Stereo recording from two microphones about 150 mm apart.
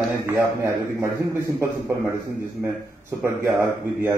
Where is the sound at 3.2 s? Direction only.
15° right (ahead or behind).